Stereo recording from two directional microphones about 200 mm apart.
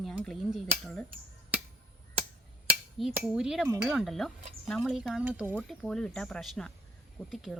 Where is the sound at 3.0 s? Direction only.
5° right (ahead or behind).